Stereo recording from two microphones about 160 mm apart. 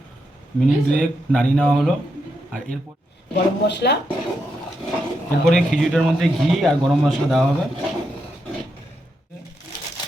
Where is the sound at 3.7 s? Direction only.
90° left.